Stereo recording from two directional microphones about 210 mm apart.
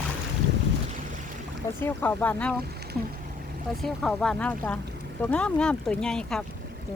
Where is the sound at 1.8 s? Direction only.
10° left (ahead or behind).